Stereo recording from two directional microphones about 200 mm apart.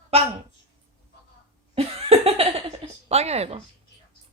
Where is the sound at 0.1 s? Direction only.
30° right (ahead or behind).